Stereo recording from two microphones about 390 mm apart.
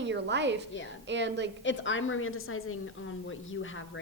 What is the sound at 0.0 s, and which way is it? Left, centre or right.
A woman's voice, right.